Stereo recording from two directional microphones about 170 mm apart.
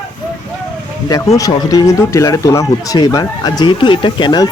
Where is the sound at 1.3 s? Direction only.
20° left (ahead or behind).